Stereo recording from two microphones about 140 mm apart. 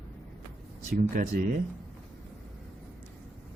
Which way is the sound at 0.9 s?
90° right.